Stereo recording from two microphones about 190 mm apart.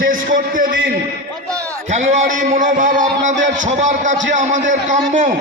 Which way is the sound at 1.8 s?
40° right (ahead or behind).